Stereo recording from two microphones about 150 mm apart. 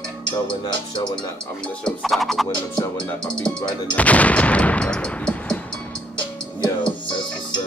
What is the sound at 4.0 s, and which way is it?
Gunshot, 10° left (ahead or behind).